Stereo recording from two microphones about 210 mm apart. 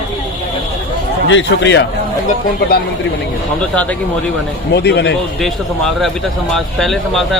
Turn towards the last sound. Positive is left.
turn(degrees=0)  # may be behind; listen again after turning